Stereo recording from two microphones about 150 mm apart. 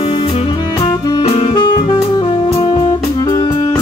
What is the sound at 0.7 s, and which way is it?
Saxophone, 25° left (ahead or behind).